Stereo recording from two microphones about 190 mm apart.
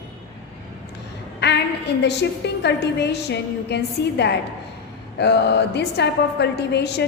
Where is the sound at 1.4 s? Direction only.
65° left (ahead or behind).